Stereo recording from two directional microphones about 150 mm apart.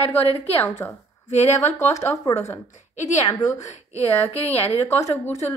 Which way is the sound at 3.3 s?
25° left (ahead or behind).